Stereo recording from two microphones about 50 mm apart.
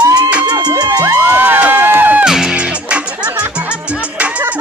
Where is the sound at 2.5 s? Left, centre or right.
Right.